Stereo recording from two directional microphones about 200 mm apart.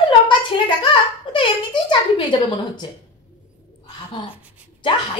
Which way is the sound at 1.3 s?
25° left (ahead or behind).